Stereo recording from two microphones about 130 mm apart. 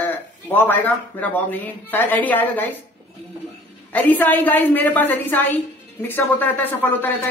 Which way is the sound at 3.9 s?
15° left (ahead or behind).